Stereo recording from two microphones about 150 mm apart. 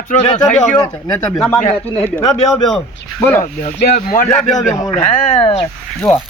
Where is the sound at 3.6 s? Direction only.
60° left (ahead or behind).